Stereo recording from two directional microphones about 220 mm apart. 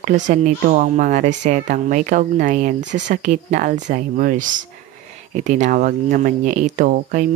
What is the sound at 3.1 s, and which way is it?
Speech, 35° right (ahead or behind).